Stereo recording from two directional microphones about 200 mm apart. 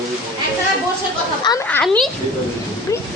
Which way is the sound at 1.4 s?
15° left (ahead or behind).